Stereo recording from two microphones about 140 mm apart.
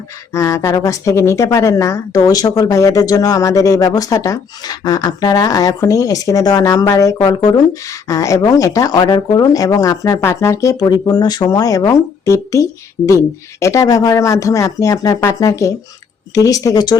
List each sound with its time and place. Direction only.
0.3 s a woman's voice: 20° left (ahead or behind)